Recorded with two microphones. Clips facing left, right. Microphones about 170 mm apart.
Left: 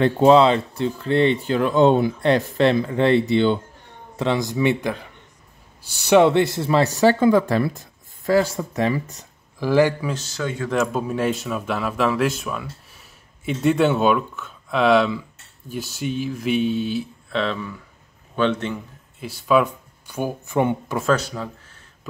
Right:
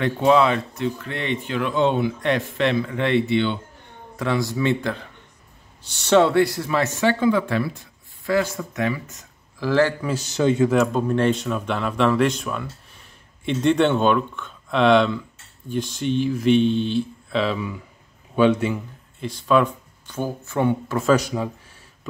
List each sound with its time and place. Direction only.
0.0 s speech: 30° left (ahead or behind)
4.2 s speech: 20° left (ahead or behind); by 9.2 s 35° left (ahead or behind)
9.6 s speech: 15° left (ahead or behind)
10.2 s speech: 20° right (ahead or behind)
10.7 s a man's voice: 5° left (ahead or behind)
19.1 s speech: 5° left (ahead or behind)
21.0 s speech: 10° right (ahead or behind)